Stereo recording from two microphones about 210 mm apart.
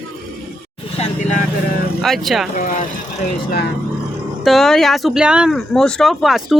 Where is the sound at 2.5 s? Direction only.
40° left (ahead or behind).